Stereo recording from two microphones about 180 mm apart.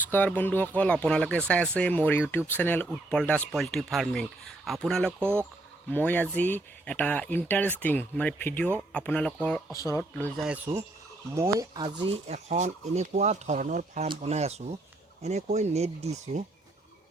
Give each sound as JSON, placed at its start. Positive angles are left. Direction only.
{"t": 0.1, "sound": "speech", "side_deg": 10}
{"t": 9.7, "sound": "speech", "side_deg": 20}
{"t": 10.4, "sound": "speech", "side_deg": -10}